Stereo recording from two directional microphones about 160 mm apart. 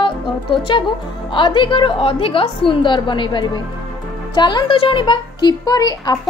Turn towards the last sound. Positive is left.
turn(degrees=25)  # may be behind; listen again after turning